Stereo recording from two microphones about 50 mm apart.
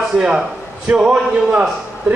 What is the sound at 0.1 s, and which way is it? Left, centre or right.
A man's voice, right.